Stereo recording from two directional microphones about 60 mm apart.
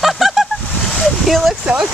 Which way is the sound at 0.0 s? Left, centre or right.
Centre.